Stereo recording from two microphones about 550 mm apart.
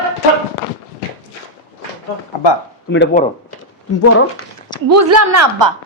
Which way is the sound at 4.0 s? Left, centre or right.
Left.